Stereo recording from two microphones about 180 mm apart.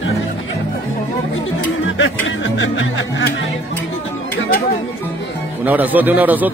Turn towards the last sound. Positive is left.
turn(degrees=-10)  # may be behind; listen again after turning